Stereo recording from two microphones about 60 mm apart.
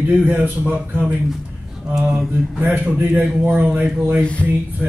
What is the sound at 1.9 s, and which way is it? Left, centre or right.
Speech, centre.